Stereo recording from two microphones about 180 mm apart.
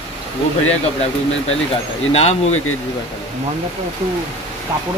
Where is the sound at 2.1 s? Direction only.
35° left (ahead or behind).